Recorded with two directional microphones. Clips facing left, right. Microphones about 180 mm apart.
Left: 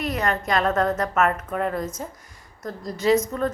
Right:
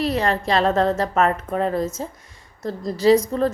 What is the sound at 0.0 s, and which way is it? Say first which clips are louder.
A woman's voice: right 4 dB; 30° right (ahead or behind).